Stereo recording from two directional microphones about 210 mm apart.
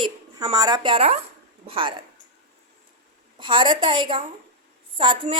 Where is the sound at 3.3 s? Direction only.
25° right (ahead or behind).